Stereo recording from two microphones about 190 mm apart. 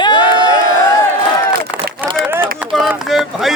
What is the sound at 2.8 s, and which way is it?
Speech, centre (ahead or behind).